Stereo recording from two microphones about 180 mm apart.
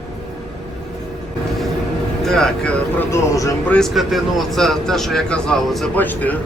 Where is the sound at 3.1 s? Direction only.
20° left (ahead or behind).